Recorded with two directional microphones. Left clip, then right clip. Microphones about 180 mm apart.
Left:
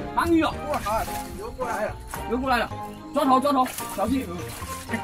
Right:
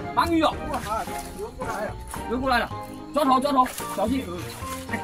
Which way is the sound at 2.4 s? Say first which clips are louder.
Right 1 dB; 10° right (ahead or behind).